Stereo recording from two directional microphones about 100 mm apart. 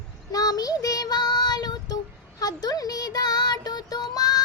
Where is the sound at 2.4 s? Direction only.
40° left (ahead or behind).